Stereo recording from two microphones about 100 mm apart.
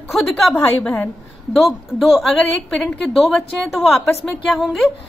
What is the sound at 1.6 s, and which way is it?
A woman's voice, centre (ahead or behind).